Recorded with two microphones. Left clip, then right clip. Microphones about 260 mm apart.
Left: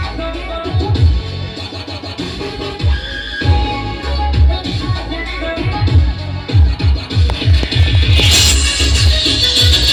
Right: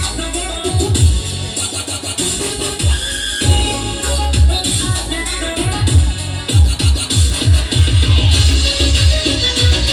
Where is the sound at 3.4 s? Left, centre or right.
Right.